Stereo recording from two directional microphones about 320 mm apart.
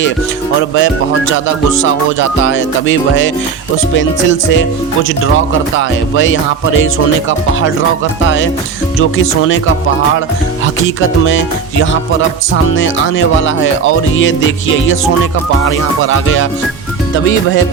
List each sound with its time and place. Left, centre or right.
0.8 s music: left
9.0 s music: left
10.8 s music: left
15.6 s music: left